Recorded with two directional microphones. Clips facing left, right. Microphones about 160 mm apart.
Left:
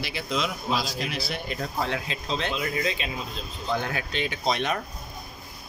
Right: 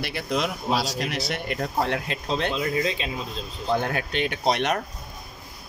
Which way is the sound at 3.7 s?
50° right (ahead or behind).